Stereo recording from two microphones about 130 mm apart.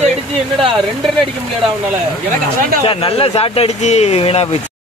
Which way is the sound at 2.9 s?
45° left (ahead or behind).